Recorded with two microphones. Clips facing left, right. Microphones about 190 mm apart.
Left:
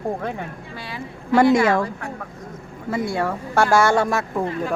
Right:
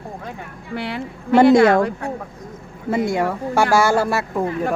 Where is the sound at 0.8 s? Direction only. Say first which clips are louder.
Right 8 dB; 65° right (ahead or behind).